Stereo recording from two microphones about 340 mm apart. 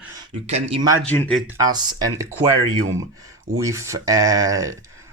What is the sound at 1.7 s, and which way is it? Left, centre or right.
Speech, centre.